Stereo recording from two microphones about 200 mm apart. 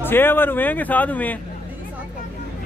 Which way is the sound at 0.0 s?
10° left (ahead or behind).